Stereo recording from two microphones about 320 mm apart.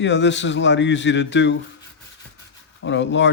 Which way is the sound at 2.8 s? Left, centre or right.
Left.